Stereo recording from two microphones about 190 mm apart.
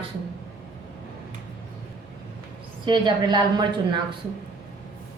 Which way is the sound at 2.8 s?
25° right (ahead or behind).